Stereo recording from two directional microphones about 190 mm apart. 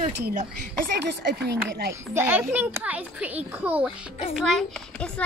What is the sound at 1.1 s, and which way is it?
Speech, 65° right (ahead or behind).